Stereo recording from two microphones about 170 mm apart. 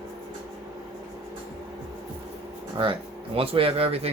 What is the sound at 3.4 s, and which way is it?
Speech, 35° right (ahead or behind).